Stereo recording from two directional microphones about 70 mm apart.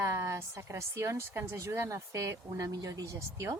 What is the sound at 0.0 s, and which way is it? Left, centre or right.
Speech, right.